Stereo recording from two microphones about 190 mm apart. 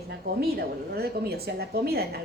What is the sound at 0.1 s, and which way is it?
A woman's voice, 60° right (ahead or behind).